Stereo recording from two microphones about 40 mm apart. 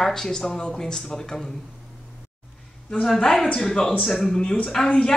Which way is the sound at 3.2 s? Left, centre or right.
Centre.